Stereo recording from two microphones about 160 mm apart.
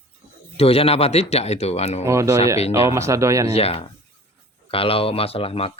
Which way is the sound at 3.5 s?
40° left (ahead or behind).